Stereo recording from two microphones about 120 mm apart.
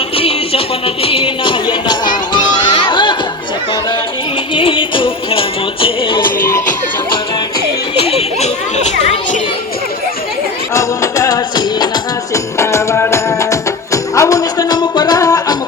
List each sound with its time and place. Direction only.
0.2 s music: 50° left (ahead or behind)
4.5 s music: 45° left (ahead or behind)
8.0 s children playing: 60° left (ahead or behind)
10.8 s music: 25° left (ahead or behind)